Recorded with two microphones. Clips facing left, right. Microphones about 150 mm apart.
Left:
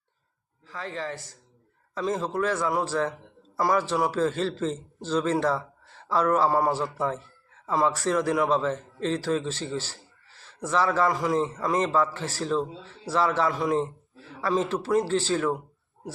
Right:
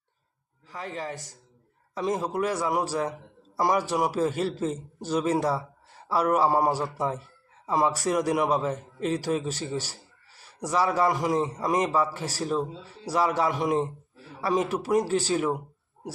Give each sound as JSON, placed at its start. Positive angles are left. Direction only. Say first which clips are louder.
{"t": 0.7, "sound": "a man's voice", "louder": "left 1 dB", "side_deg": -15}